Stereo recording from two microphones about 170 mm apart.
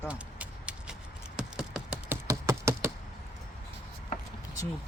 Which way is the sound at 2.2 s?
15° right (ahead or behind).